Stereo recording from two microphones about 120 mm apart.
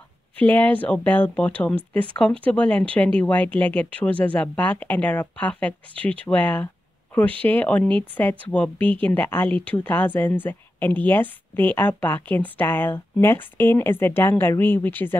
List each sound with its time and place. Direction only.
0.4 s speech: 15° left (ahead or behind)